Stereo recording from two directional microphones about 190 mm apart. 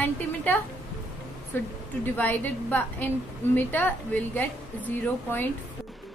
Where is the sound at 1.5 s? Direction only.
10° left (ahead or behind).